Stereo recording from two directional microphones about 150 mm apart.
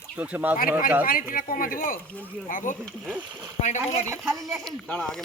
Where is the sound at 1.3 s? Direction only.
70° left (ahead or behind); by 4.0 s 50° left (ahead or behind).